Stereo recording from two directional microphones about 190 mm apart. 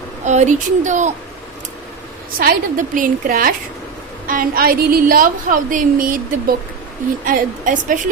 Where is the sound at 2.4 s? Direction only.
45° right (ahead or behind).